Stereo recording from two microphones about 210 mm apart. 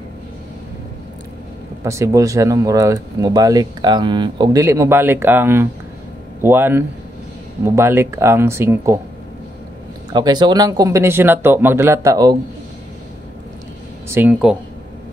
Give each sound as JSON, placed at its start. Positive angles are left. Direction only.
{"t": 1.9, "sound": "speech", "side_deg": -15}
{"t": 10.1, "sound": "speech", "side_deg": -20}
{"t": 14.0, "sound": "speech", "side_deg": -10}